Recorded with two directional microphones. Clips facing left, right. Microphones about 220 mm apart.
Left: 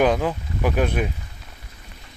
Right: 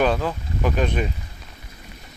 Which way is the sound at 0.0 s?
15° left (ahead or behind).